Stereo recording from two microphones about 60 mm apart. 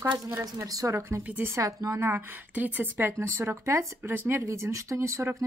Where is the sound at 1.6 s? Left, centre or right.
Right.